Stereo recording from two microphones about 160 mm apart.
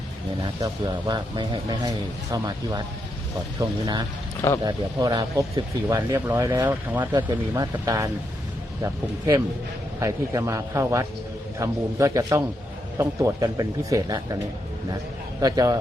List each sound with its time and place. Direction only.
0.6 s speech: 25° right (ahead or behind)
7.1 s speech: 25° right (ahead or behind)
15.4 s speech: 25° right (ahead or behind)